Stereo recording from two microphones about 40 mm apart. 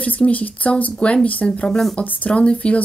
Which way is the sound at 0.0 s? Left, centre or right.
Left.